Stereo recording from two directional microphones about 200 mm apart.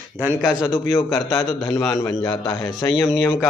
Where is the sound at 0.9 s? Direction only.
15° left (ahead or behind).